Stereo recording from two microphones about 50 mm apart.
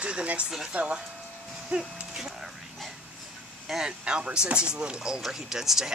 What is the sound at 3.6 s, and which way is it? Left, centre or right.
Speech, centre.